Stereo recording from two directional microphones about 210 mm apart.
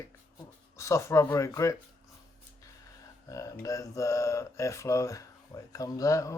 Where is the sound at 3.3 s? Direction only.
15° left (ahead or behind).